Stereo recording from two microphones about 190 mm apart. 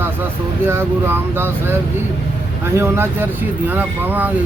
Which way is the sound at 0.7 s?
10° right (ahead or behind).